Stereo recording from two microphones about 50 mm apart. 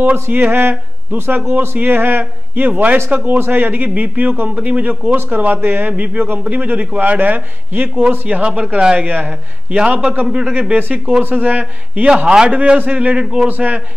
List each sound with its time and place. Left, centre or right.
0.0 s a man's voice: right
2.7 s a man's voice: right
3.3 s a man's voice: right
8.1 s a man's voice: right
9.0 s a man's voice: right
9.8 s a man's voice: right
10.2 s speech: centre
10.5 s a man's voice: right
11.2 s a man's voice: right; by 13.5 s centre
13.5 s a man's voice: right